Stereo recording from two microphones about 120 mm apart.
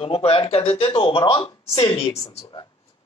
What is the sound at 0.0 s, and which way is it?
Speech, 55° left (ahead or behind).